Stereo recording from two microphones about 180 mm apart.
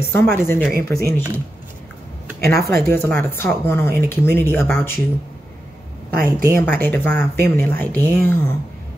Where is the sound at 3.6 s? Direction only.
10° left (ahead or behind).